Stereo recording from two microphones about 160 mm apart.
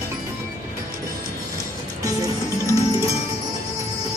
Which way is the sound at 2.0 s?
20° right (ahead or behind).